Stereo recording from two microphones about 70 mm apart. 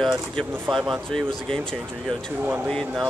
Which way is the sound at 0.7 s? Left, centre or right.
Centre.